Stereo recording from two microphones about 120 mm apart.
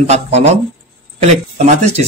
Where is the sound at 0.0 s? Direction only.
65° right (ahead or behind).